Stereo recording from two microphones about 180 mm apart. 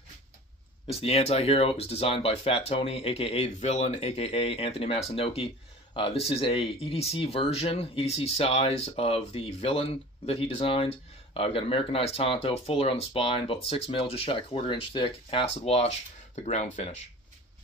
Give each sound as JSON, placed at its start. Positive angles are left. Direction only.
{"t": 0.9, "sound": "speech", "side_deg": 35}